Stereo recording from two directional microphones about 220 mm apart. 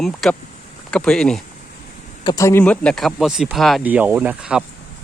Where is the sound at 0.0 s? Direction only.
Centre (ahead or behind).